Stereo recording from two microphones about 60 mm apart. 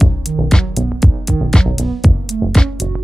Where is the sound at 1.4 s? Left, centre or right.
Centre.